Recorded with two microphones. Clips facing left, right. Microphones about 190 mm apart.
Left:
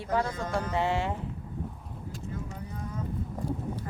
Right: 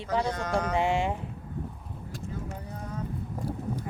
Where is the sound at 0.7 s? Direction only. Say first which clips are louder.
Right 2 dB; 15° right (ahead or behind).